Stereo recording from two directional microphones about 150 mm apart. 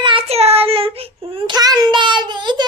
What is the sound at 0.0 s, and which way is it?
Child singing, 35° right (ahead or behind).